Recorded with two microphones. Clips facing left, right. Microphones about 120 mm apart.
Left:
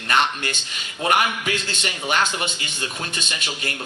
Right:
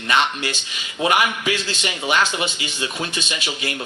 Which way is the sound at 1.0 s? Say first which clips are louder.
Right 2 dB; 45° left (ahead or behind).